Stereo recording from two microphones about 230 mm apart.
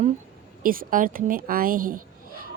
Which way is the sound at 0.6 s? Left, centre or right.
Right.